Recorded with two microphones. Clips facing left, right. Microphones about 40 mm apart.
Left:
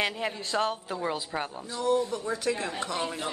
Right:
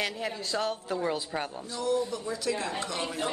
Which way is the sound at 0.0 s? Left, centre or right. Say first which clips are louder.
Left 2 dB; left.